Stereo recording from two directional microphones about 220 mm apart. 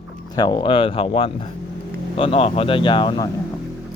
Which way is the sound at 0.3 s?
20° left (ahead or behind).